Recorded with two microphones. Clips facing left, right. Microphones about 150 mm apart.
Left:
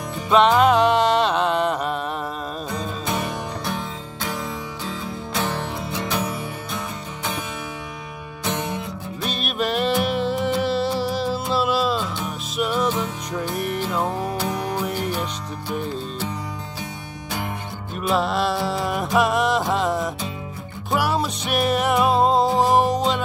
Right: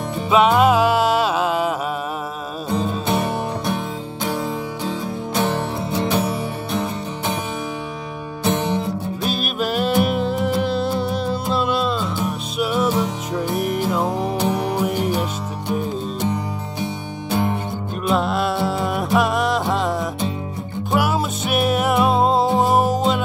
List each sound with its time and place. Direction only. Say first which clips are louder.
0.3 s music: right 1 dB; 5° right (ahead or behind)
3.1 s music: right 4 dB; 30° right (ahead or behind)
5.3 s music: right 5 dB; 25° right (ahead or behind)
8.5 s music: right 6 dB; 35° right (ahead or behind)
9.2 s music: right 1 dB; centre (ahead or behind)
17.3 s music: right 8 dB; 30° right (ahead or behind)
18.0 s music: right 1 dB; centre (ahead or behind)